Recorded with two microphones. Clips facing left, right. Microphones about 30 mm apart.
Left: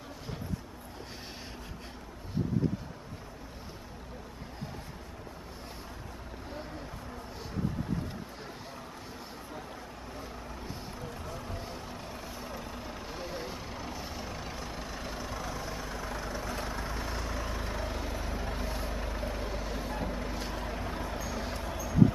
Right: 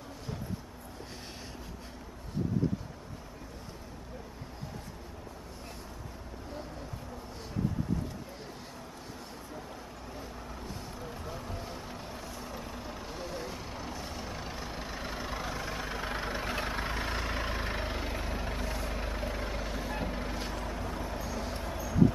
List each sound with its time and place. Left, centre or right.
11.1 s vehicle: centre
11.4 s vehicle: centre
15.2 s vehicle: right
18.6 s vehicle: centre
18.9 s vehicle: centre
20.5 s vehicle: centre